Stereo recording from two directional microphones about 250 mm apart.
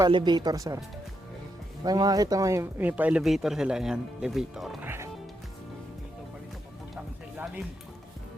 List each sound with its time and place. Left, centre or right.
0.0 s speech: centre
1.8 s speech: centre
6.9 s music: centre